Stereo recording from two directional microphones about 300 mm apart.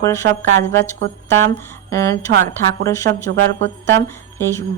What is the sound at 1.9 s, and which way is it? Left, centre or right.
A woman's voice, centre.